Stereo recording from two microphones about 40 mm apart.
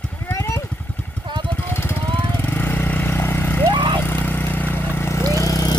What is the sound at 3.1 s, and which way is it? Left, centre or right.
Vehicle, left.